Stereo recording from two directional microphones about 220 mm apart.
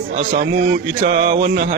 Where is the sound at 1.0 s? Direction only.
40° right (ahead or behind).